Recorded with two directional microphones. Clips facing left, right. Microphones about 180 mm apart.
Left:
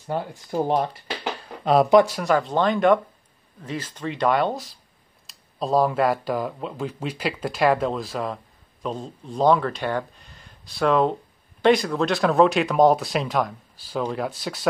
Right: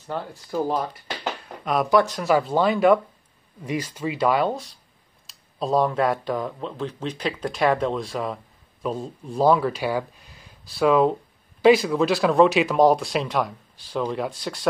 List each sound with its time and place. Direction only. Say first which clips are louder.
0.0 s speech: left 3 dB; 15° left (ahead or behind)
2.0 s speech: right 1 dB; centre (ahead or behind)